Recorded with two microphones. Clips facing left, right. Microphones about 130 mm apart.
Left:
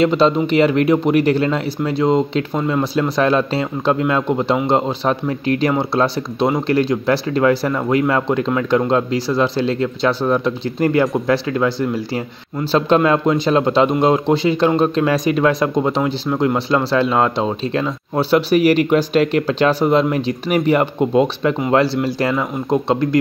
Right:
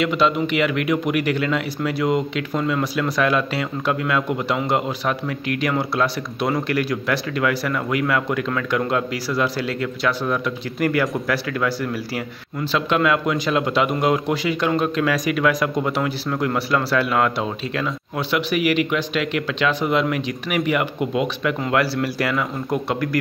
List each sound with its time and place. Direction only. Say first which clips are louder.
0.0 s speech: left 5 dB; 30° left (ahead or behind)